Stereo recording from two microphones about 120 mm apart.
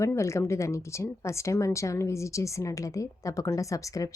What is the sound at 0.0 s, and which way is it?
A woman's voice, 25° left (ahead or behind).